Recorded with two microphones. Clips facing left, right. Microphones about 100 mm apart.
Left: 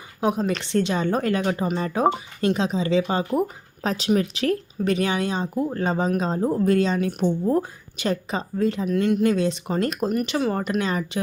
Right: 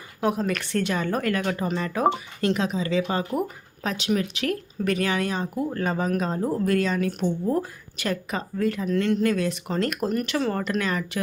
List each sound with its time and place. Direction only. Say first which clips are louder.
0.2 s speech: left 2 dB; 20° left (ahead or behind)